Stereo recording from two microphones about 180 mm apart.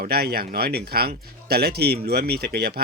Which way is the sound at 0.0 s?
60° right (ahead or behind).